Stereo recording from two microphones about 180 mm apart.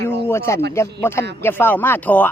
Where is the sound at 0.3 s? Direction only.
15° left (ahead or behind).